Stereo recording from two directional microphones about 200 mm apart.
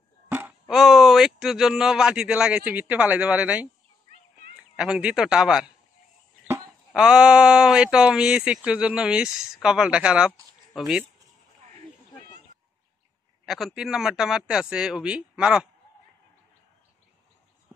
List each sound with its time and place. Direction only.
0.3 s speech: 10° right (ahead or behind)
4.7 s speech: 5° right (ahead or behind)
13.5 s speech: centre (ahead or behind)